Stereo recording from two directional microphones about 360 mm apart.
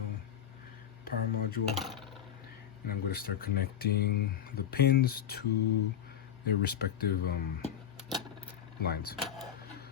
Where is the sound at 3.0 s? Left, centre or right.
Left.